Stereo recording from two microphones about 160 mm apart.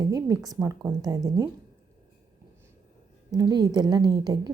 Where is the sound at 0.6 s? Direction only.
10° right (ahead or behind).